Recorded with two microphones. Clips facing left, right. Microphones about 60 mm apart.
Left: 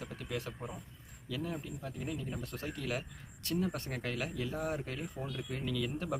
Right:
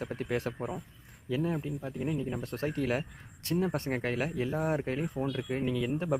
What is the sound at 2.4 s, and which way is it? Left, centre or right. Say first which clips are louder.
Speech: right 8 dB; right.